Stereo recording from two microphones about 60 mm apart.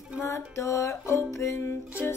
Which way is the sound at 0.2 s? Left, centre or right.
Left.